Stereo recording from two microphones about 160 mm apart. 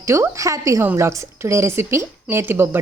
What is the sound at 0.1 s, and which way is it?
A woman's voice, 20° right (ahead or behind).